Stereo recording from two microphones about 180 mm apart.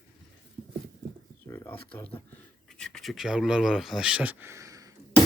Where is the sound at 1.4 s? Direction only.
15° left (ahead or behind).